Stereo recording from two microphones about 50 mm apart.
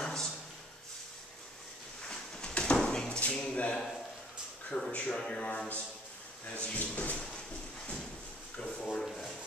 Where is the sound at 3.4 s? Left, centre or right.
Left.